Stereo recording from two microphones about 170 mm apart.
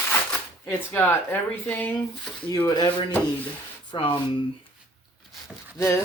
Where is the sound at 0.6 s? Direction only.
15° left (ahead or behind).